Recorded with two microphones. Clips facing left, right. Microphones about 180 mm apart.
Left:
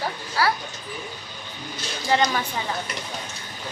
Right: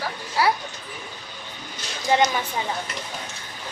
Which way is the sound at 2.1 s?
20° right (ahead or behind).